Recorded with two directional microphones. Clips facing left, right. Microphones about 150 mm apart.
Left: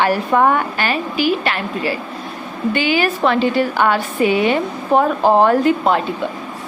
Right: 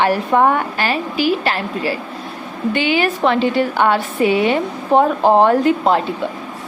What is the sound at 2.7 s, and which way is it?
A woman's voice, 25° right (ahead or behind).